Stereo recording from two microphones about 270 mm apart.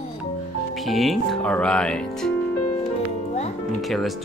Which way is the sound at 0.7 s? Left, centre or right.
Centre.